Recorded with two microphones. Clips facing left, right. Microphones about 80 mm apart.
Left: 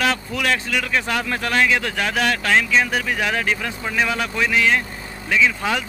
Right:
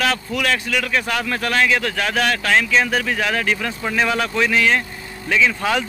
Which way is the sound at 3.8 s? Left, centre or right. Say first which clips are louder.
Right 2 dB; centre.